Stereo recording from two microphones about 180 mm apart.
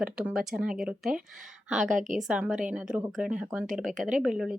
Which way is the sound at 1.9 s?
45° right (ahead or behind).